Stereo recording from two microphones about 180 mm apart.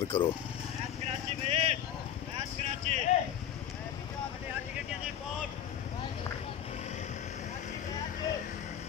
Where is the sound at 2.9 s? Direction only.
40° right (ahead or behind).